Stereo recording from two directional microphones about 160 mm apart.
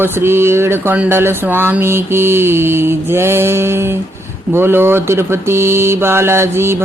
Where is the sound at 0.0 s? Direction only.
15° right (ahead or behind).